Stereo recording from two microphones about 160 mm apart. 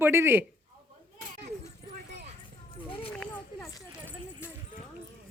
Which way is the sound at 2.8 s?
35° left (ahead or behind).